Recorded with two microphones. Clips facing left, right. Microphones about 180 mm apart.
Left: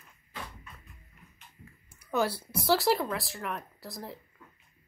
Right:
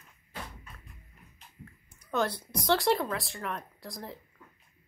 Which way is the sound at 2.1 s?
10° left (ahead or behind).